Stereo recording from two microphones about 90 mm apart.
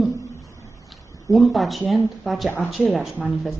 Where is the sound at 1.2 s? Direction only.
Centre (ahead or behind).